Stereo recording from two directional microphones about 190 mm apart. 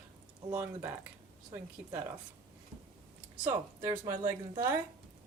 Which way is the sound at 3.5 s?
10° right (ahead or behind).